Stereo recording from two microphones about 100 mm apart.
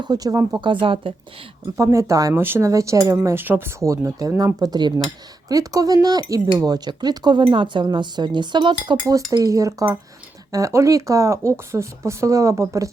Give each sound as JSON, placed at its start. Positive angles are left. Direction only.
{"t": 0.0, "sound": "speech", "side_deg": -40}
{"t": 0.6, "sound": "speech", "side_deg": -55}
{"t": 1.7, "sound": "speech", "side_deg": -30}
{"t": 2.3, "sound": "speech", "side_deg": -20}
{"t": 9.0, "sound": "speech", "side_deg": -35}